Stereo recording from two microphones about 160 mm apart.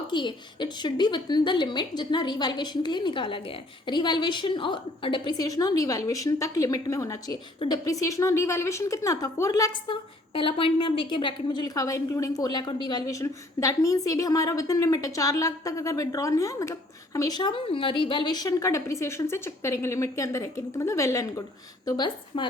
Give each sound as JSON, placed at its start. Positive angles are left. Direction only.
{"t": 0.1, "sound": "a woman's voice", "side_deg": 30}
{"t": 10.3, "sound": "a woman's voice", "side_deg": 35}